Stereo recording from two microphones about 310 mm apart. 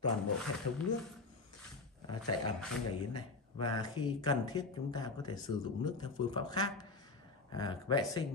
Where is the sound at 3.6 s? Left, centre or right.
Centre.